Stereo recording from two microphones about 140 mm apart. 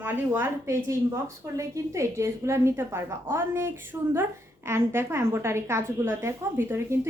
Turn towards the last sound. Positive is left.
turn(degrees=-20)  # may be behind; listen again after turning